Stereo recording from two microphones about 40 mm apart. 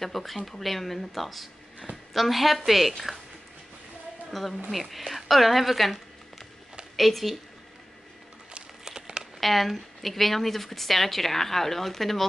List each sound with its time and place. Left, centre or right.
0.0 s a woman's voice: centre
4.3 s a woman's voice: centre
7.0 s a woman's voice: centre
8.8 s crumpling: centre
9.4 s a woman's voice: centre